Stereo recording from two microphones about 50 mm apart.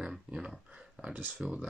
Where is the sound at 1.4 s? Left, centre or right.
Centre.